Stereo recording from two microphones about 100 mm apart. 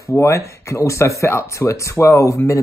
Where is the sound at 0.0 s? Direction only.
30° left (ahead or behind).